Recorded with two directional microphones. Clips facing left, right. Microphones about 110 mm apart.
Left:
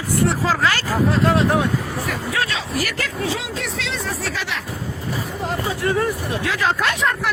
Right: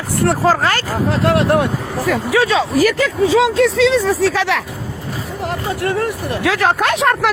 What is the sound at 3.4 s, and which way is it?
Speech, 90° right.